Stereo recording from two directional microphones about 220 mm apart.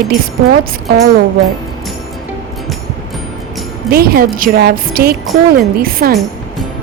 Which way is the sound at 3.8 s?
45° right (ahead or behind).